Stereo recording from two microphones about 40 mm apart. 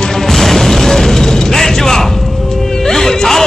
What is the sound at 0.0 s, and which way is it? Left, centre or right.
Music, centre.